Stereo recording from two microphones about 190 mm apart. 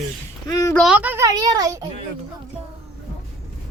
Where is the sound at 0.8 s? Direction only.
5° right (ahead or behind).